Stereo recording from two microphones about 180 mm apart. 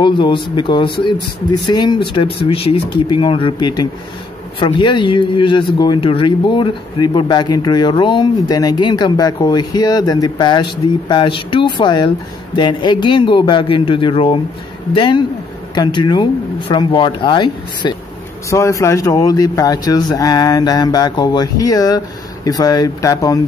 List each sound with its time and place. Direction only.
0.0 s speech: 25° left (ahead or behind)